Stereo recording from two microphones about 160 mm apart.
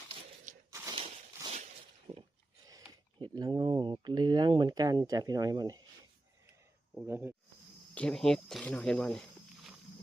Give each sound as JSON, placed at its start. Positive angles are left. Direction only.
{"t": 0.7, "sound": "a sound", "side_deg": -15}
{"t": 3.2, "sound": "speech", "side_deg": -25}
{"t": 7.1, "sound": "speech", "side_deg": -15}
{"t": 7.9, "sound": "speech", "side_deg": 5}